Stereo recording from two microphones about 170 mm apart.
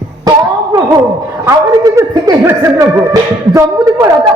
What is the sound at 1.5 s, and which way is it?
Speech, 20° right (ahead or behind).